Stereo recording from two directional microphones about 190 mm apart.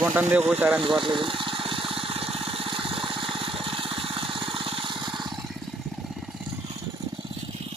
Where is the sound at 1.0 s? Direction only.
25° right (ahead or behind).